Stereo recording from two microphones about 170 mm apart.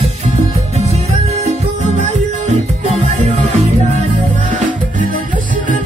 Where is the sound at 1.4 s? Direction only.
40° right (ahead or behind).